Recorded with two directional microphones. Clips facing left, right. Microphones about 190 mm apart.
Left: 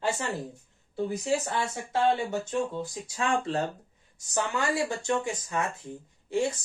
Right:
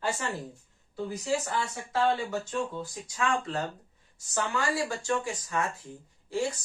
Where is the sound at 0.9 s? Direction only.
25° left (ahead or behind).